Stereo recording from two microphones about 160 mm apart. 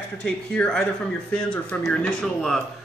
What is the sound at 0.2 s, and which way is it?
A man's voice, 5° left (ahead or behind).